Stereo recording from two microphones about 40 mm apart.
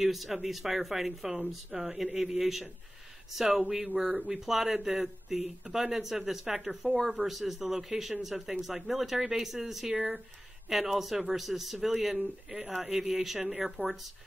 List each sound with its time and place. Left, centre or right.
0.0 s speech: centre
3.8 s speech: right
4.3 s speech: centre
7.0 s speech: centre
7.2 s speech: centre
9.9 s speech: right
10.7 s a man's voice: centre